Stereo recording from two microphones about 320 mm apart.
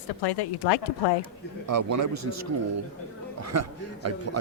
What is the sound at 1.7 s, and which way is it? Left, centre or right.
A man's voice, right.